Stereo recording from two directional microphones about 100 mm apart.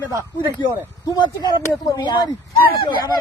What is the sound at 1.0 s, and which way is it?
Speech, 45° left (ahead or behind).